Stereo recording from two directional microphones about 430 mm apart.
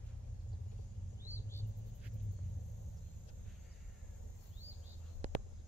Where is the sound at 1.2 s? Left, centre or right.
Centre.